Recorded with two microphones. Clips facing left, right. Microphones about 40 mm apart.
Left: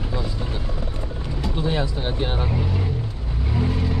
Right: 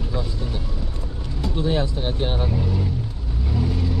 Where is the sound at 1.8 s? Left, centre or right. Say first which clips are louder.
Right 1 dB; centre.